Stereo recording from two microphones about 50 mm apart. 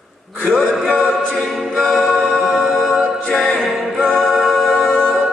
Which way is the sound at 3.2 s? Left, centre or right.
Centre.